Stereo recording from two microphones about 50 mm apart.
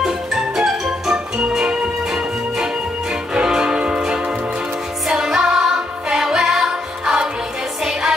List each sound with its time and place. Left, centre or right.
0.0 s music: centre